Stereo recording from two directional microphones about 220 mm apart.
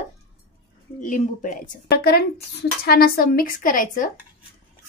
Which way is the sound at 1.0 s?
35° left (ahead or behind).